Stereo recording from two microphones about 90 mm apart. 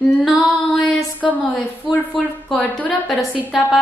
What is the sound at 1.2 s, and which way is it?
Speech, centre (ahead or behind).